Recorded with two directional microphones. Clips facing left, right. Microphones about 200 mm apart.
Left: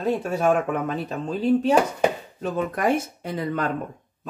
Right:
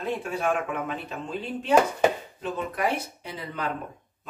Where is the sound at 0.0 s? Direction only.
40° left (ahead or behind).